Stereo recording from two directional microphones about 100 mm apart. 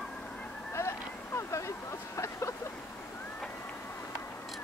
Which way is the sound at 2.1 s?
30° left (ahead or behind).